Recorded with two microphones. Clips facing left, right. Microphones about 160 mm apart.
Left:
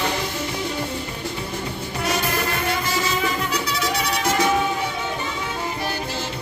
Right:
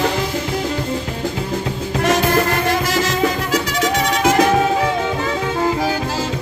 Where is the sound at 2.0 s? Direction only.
90° right.